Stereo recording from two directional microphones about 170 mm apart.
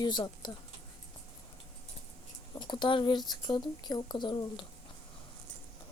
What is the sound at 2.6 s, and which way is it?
Speech, 25° left (ahead or behind).